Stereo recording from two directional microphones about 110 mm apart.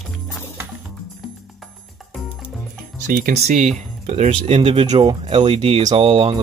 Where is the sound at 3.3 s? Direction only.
80° right.